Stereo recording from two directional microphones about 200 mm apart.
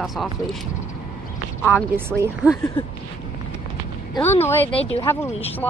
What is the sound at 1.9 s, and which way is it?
Speech, 10° right (ahead or behind).